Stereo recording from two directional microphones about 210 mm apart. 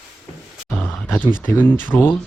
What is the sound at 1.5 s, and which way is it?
Speech, 10° left (ahead or behind).